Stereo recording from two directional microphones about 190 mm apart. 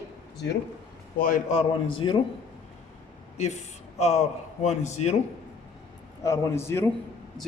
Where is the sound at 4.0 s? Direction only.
35° left (ahead or behind).